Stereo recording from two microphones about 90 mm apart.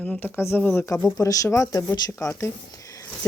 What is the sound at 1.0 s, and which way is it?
Speech, 40° left (ahead or behind).